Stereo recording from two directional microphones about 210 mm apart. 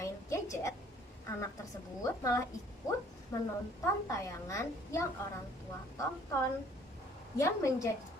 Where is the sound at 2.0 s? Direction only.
15° left (ahead or behind).